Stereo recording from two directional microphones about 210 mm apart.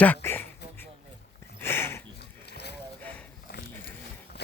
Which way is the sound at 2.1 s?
50° left (ahead or behind).